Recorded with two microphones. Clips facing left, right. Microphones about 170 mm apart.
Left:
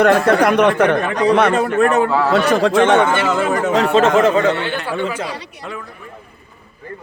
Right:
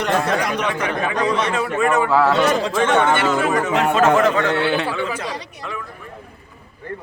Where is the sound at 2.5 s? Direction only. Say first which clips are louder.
Left 5 dB; 65° left (ahead or behind).